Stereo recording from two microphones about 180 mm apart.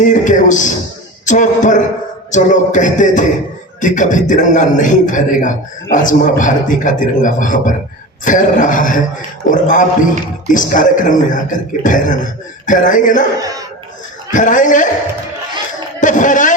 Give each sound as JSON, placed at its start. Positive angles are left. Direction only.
{"t": 0.0, "sound": "a man's voice", "side_deg": 45}
{"t": 13.4, "sound": "speech", "side_deg": -20}
{"t": 14.3, "sound": "a man's voice", "side_deg": 45}
{"t": 16.0, "sound": "a man's voice", "side_deg": 45}